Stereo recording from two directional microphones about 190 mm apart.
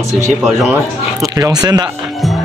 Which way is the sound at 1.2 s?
20° right (ahead or behind).